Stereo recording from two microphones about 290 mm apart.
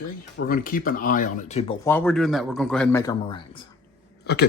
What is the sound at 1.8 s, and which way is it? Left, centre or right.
Speech, centre.